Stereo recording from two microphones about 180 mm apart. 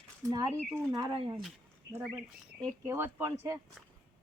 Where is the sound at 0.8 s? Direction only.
20° right (ahead or behind).